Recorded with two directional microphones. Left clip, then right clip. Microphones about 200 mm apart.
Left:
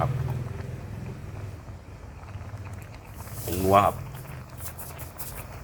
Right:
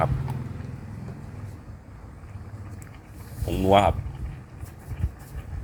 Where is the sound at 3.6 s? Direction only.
15° right (ahead or behind).